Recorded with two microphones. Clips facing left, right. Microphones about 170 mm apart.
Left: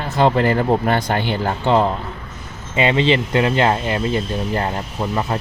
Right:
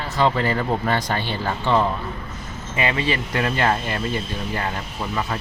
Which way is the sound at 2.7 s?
25° left (ahead or behind).